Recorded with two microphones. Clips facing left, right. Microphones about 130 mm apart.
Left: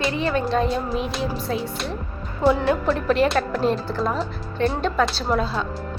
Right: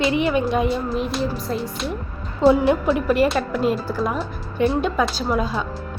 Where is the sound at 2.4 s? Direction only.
20° right (ahead or behind).